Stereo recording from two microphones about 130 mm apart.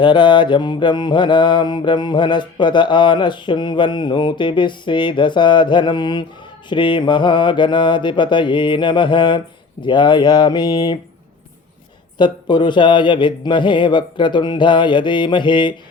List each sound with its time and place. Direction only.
0.0 s mantra: 35° left (ahead or behind)
12.1 s mantra: 35° left (ahead or behind)